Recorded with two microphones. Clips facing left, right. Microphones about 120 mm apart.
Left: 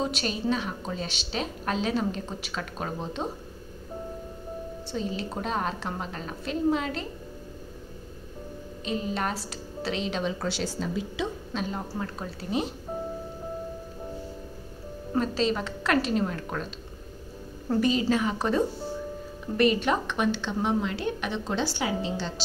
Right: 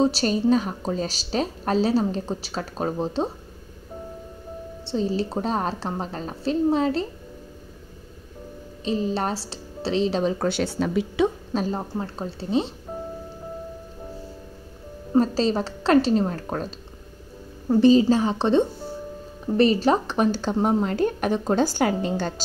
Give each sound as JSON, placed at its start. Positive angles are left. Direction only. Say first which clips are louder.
{"t": 0.0, "sound": "a woman's voice", "louder": "right 8 dB", "side_deg": -35}
{"t": 4.8, "sound": "a woman's voice", "louder": "right 8 dB", "side_deg": -35}
{"t": 8.8, "sound": "a woman's voice", "louder": "right 5 dB", "side_deg": -30}
{"t": 10.4, "sound": "speech", "louder": "right 7 dB", "side_deg": -60}
{"t": 11.5, "sound": "a woman's voice", "louder": "right 6 dB", "side_deg": -35}
{"t": 15.1, "sound": "a woman's voice", "louder": "right 6 dB", "side_deg": -35}
{"t": 17.7, "sound": "a woman's voice", "louder": "right 8 dB", "side_deg": -30}